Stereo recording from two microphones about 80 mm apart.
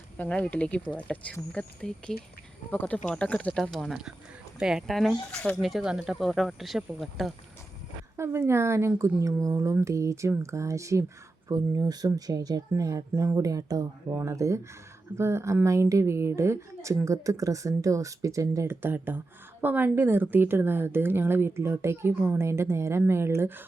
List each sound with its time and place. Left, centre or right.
0.2 s speech: centre
5.6 s speech: centre
8.1 s a woman's voice: right
14.1 s a woman's voice: right
18.7 s a woman's voice: right